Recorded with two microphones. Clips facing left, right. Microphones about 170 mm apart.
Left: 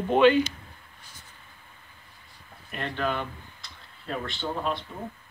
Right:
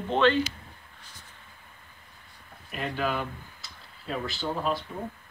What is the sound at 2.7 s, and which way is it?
Speech, 5° right (ahead or behind).